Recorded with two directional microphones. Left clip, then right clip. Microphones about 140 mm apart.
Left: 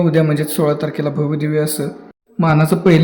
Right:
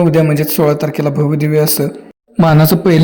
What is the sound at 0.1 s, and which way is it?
Speech, 10° right (ahead or behind).